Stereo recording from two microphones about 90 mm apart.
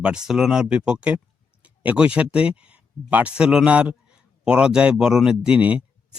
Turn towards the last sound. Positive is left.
turn(degrees=-15)  # may be behind; listen again after turning